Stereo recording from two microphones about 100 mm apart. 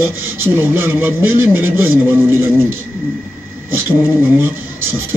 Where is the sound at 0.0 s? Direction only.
20° right (ahead or behind).